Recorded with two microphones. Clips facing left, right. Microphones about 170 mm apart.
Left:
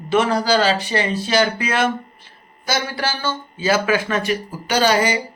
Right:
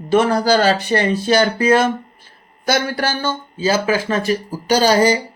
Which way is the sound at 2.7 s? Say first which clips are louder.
Right 4 dB; 55° right (ahead or behind).